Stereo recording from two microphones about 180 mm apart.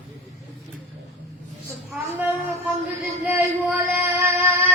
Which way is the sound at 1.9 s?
10° right (ahead or behind).